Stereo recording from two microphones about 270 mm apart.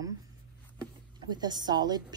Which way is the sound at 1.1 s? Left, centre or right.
Centre.